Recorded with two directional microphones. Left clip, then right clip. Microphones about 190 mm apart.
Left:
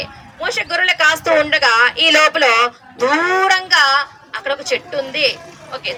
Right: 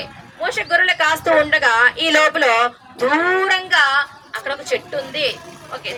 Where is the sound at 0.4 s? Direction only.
35° left (ahead or behind).